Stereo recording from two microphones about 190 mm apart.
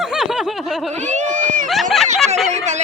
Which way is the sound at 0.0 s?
5° right (ahead or behind).